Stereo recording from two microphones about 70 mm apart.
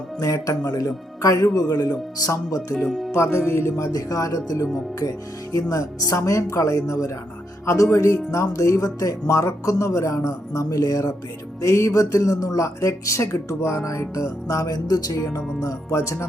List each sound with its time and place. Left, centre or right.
0.2 s speech: left
2.8 s speech: centre
3.1 s speech: left
4.6 s speech: left
14.4 s music: left
15.1 s speech: left
15.4 s speech: centre
15.9 s speech: left